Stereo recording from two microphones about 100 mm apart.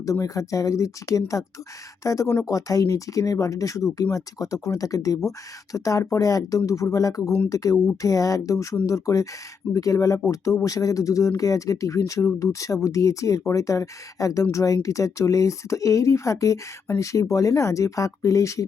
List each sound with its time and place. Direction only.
0.0 s speech: 30° left (ahead or behind)